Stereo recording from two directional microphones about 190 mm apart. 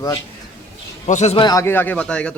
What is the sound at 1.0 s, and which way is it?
Speech, 35° left (ahead or behind).